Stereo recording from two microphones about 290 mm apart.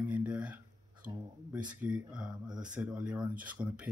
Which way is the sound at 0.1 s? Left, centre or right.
Centre.